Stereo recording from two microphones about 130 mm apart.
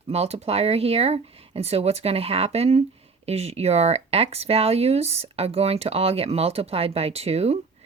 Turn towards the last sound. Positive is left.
turn(degrees=-55)  # may be behind; listen again after turning